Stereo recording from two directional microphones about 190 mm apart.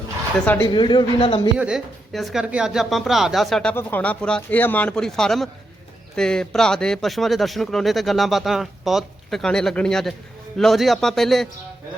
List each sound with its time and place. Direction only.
0.6 s speech: 25° left (ahead or behind)
1.5 s speech: 5° right (ahead or behind)